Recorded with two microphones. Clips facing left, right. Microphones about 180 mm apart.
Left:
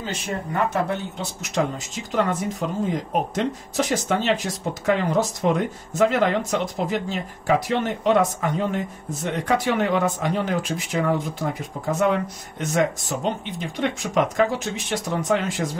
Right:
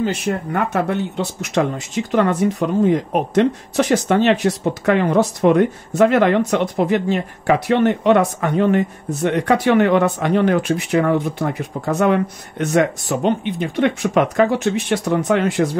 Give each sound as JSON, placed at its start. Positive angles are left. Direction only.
{"t": 0.0, "sound": "speech", "side_deg": -65}